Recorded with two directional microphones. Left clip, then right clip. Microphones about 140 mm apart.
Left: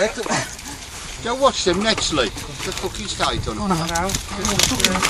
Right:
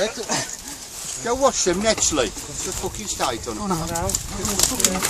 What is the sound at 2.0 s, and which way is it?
Speech, 45° right (ahead or behind).